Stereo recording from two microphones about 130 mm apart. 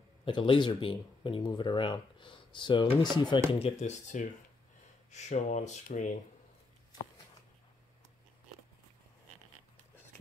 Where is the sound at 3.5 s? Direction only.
50° left (ahead or behind); by 6.1 s 70° left (ahead or behind).